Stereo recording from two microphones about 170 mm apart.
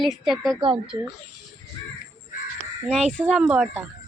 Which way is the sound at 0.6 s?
30° right (ahead or behind).